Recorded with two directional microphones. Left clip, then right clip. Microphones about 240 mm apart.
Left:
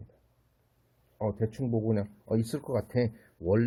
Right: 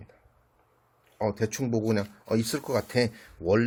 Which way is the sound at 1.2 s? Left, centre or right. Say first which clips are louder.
Right 4 dB; centre.